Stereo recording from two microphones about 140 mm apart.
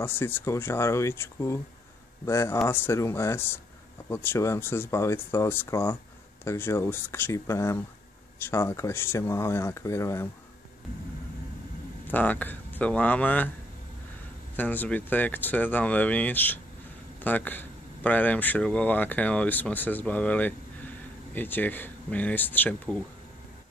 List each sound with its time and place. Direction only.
0.0 s speech: 15° left (ahead or behind)
12.1 s speech: 10° left (ahead or behind)
14.6 s speech: 15° left (ahead or behind)